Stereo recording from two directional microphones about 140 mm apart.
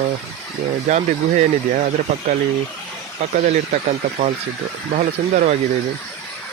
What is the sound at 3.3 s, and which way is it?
Speech, 70° right (ahead or behind).